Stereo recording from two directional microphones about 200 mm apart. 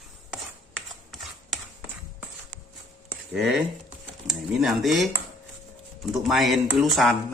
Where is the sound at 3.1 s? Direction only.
Centre (ahead or behind).